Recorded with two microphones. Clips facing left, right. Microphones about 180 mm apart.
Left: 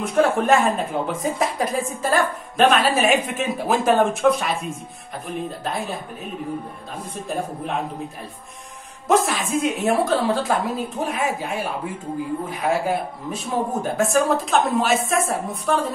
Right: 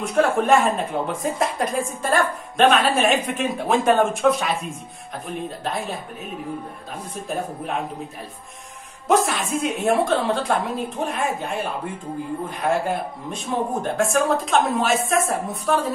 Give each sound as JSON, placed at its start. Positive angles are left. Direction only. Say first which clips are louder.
{"t": 0.0, "sound": "a woman's voice", "louder": "left 1 dB", "side_deg": 0}
{"t": 7.2, "sound": "a woman's voice", "louder": "left 1 dB", "side_deg": 0}
{"t": 9.0, "sound": "a woman's voice", "louder": "even", "side_deg": 0}